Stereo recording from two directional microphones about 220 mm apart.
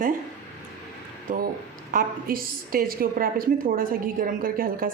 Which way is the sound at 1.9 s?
40° right (ahead or behind).